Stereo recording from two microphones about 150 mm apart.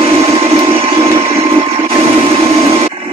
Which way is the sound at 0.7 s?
35° right (ahead or behind).